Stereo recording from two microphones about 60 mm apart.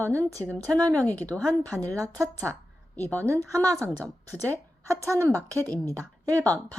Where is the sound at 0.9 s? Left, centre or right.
Left.